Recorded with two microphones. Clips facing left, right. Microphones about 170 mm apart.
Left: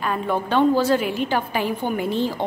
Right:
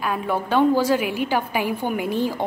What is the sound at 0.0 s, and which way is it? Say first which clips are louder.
A woman's voice: left 1 dB; 5° right (ahead or behind).